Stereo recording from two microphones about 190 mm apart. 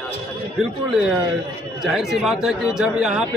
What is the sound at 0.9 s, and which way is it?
Speech, centre (ahead or behind).